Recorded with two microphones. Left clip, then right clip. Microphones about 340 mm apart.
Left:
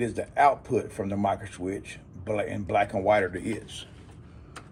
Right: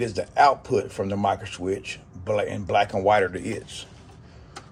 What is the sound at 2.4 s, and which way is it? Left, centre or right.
Speech, right.